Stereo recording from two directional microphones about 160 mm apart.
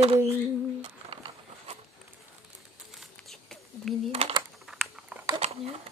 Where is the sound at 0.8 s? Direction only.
35° right (ahead or behind).